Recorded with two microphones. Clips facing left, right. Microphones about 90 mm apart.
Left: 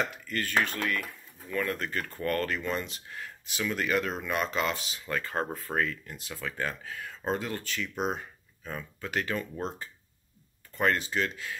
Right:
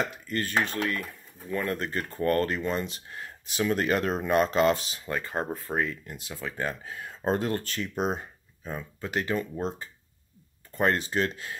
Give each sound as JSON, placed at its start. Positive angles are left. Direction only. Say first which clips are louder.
{"t": 0.3, "sound": "speech", "louder": "right 1 dB", "side_deg": -30}
{"t": 5.0, "sound": "speech", "louder": "even", "side_deg": -20}
{"t": 7.2, "sound": "speech", "louder": "right 5 dB", "side_deg": -45}
{"t": 7.9, "sound": "speech", "louder": "right 3 dB", "side_deg": -25}